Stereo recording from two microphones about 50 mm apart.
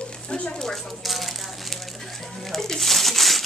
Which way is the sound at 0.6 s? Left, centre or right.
Centre.